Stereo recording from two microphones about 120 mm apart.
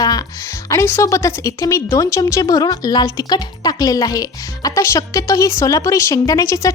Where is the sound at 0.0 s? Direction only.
30° left (ahead or behind).